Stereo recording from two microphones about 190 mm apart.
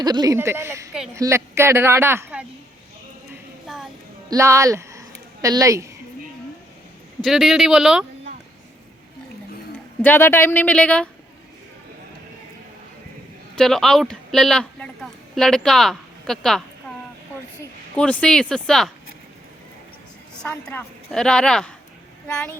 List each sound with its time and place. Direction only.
0.0 s speech: 20° right (ahead or behind)
4.3 s speech: 15° right (ahead or behind)
7.2 s a woman's voice: centre (ahead or behind)
10.0 s speech: 10° left (ahead or behind)
13.6 s a woman's voice: centre (ahead or behind)
20.4 s a woman's voice: 5° left (ahead or behind)